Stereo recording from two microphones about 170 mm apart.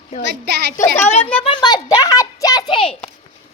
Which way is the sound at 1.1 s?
35° left (ahead or behind).